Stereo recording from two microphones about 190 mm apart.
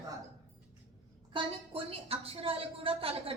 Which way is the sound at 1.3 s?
30° right (ahead or behind).